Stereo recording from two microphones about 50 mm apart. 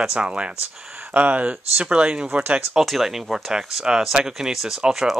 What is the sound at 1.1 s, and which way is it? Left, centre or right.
Speech, right.